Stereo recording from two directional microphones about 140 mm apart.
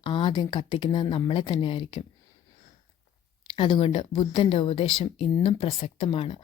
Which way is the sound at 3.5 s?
40° left (ahead or behind).